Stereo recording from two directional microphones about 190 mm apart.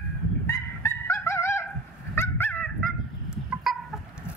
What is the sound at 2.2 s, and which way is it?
Dog, 10° left (ahead or behind).